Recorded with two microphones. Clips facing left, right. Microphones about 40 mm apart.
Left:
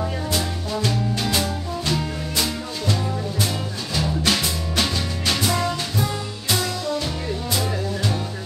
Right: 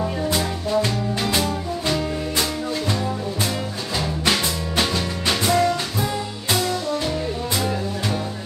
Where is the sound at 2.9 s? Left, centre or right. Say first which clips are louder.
Right 1 dB; right.